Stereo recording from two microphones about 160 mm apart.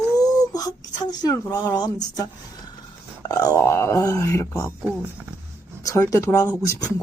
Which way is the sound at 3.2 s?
20° left (ahead or behind).